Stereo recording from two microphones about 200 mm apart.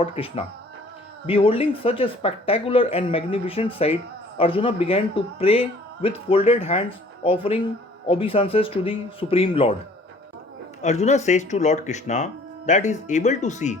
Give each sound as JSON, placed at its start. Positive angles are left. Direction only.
{"t": 0.0, "sound": "speech", "side_deg": 30}
{"t": 10.8, "sound": "speech", "side_deg": 35}